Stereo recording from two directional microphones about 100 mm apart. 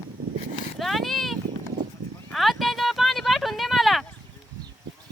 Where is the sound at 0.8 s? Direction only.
Centre (ahead or behind).